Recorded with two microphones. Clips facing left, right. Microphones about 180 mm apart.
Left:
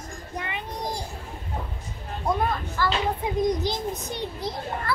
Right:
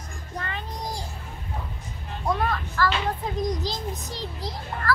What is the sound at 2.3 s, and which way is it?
Speech, 15° left (ahead or behind).